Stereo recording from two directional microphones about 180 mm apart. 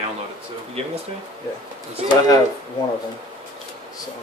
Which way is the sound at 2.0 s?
35° right (ahead or behind).